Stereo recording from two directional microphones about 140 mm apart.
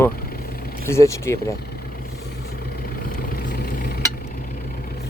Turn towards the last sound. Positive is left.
turn(degrees=90)